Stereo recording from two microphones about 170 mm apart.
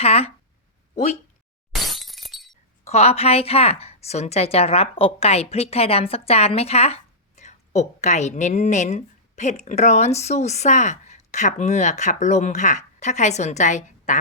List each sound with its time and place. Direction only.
0.0 s a woman's voice: 35° left (ahead or behind)
1.7 s breaking: centre (ahead or behind)
2.8 s a woman's voice: 40° left (ahead or behind)